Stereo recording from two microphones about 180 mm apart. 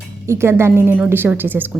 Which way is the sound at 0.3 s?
15° right (ahead or behind).